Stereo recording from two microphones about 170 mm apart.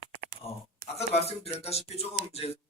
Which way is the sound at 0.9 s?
35° left (ahead or behind).